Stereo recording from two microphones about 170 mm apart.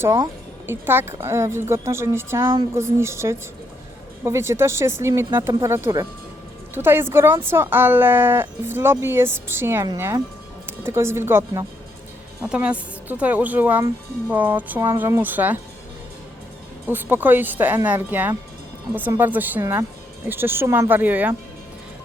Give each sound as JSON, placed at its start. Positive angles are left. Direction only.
{"t": 0.0, "sound": "speech", "side_deg": -20}
{"t": 16.8, "sound": "speech", "side_deg": -10}